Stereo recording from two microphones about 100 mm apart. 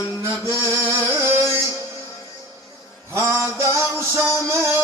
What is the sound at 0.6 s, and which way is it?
Music, 25° right (ahead or behind).